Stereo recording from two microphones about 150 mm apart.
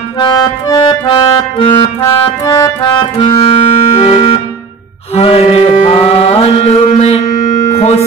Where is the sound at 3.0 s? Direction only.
35° left (ahead or behind).